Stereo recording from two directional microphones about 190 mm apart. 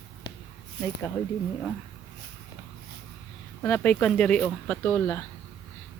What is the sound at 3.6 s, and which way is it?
Speech, 10° left (ahead or behind).